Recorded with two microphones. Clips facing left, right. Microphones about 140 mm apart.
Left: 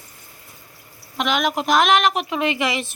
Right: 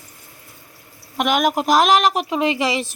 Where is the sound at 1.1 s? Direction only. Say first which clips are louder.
Right 3 dB; 50° right (ahead or behind).